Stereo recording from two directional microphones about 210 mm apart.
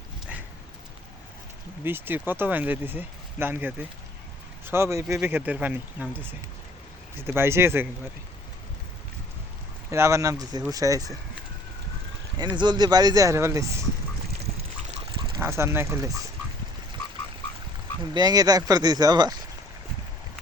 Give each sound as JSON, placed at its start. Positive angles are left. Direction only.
{"t": 1.8, "sound": "speech", "side_deg": -10}
{"t": 9.9, "sound": "speech", "side_deg": -15}
{"t": 12.4, "sound": "speech", "side_deg": -20}
{"t": 15.4, "sound": "speech", "side_deg": -10}
{"t": 18.1, "sound": "speech", "side_deg": -20}